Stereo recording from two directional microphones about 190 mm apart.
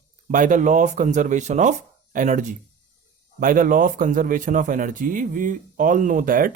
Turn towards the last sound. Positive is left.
turn(degrees=-45)  # may be behind; listen again after turning